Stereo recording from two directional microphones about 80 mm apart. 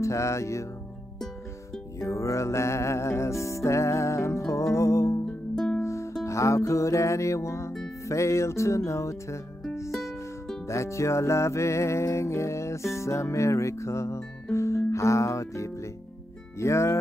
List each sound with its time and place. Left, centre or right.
0.0 s music: left
2.0 s music: left
10.7 s music: left